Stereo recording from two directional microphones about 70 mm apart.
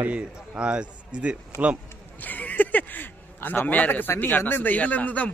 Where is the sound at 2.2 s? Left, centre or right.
Left.